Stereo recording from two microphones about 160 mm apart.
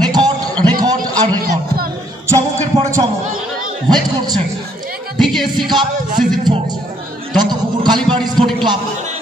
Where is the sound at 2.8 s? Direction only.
20° right (ahead or behind).